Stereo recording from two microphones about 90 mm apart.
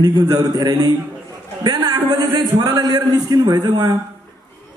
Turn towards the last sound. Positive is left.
turn(degrees=-50)  # may be behind; listen again after turning